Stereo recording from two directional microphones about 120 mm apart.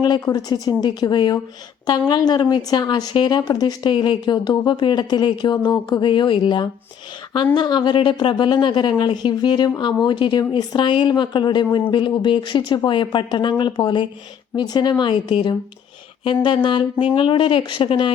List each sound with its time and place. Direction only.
0.0 s a woman's voice: 35° left (ahead or behind)